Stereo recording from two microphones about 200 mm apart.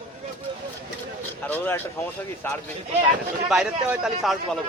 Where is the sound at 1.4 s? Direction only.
10° left (ahead or behind).